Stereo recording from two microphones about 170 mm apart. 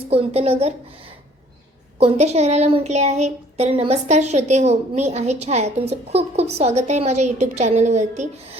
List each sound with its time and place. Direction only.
0.1 s speech: 35° right (ahead or behind)
2.0 s speech: 40° right (ahead or behind)